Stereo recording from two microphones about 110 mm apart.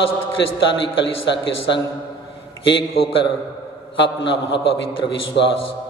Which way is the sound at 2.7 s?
55° left (ahead or behind).